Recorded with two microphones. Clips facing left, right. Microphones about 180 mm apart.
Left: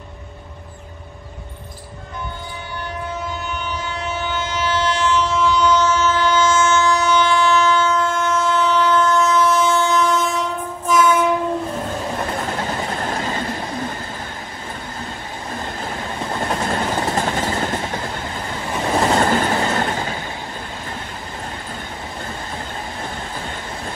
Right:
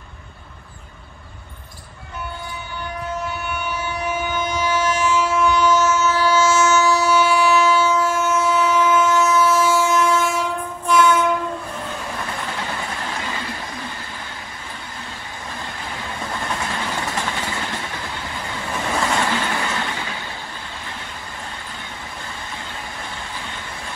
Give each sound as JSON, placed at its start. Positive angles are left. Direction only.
{"t": 3.8, "sound": "train", "side_deg": -10}
{"t": 12.4, "sound": "train", "side_deg": 40}
{"t": 15.8, "sound": "train", "side_deg": 35}
{"t": 16.6, "sound": "vehicle", "side_deg": 45}
{"t": 18.9, "sound": "train", "side_deg": 40}